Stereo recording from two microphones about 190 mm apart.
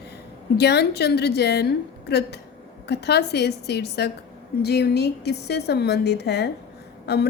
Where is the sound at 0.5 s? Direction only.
60° left (ahead or behind).